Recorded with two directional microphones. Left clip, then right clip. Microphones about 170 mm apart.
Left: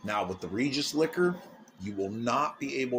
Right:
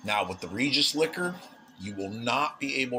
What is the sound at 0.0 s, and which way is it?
Speech, 40° left (ahead or behind).